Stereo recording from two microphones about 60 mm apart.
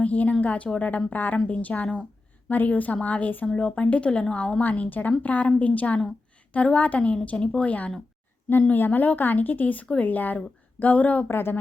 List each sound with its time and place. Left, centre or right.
0.0 s a woman's voice: left
4.6 s a woman's voice: left
11.3 s speech: left